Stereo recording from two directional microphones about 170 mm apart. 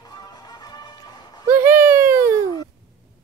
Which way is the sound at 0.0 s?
25° left (ahead or behind).